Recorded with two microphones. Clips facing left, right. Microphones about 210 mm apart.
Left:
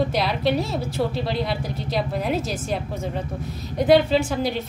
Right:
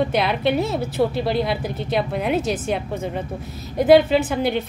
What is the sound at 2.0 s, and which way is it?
A woman's voice, centre (ahead or behind).